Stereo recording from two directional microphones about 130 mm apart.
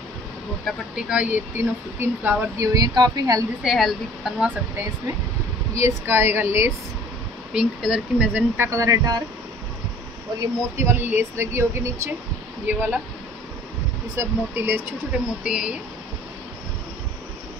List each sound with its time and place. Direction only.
0.9 s speech: 10° right (ahead or behind); by 3.4 s 30° right (ahead or behind)
3.6 s speech: centre (ahead or behind)
5.8 s speech: 20° right (ahead or behind)
7.5 s speech: 5° right (ahead or behind); by 9.2 s 25° right (ahead or behind)
10.4 s speech: 20° right (ahead or behind)
14.1 s speech: 15° right (ahead or behind)